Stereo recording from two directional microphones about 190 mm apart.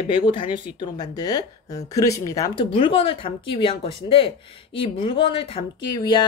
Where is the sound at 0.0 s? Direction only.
25° left (ahead or behind).